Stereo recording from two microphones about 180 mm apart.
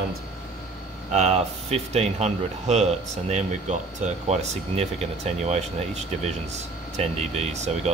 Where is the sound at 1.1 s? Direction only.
35° right (ahead or behind).